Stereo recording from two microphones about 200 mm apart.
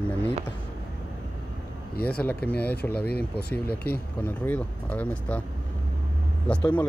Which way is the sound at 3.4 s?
50° left (ahead or behind).